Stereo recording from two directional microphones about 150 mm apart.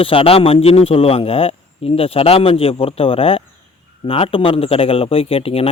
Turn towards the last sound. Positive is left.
turn(degrees=40)  # may be behind; listen again after turning